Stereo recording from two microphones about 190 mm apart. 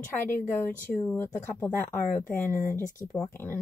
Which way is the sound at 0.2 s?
10° left (ahead or behind).